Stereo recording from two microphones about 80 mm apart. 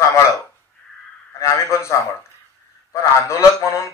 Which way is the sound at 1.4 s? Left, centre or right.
Left.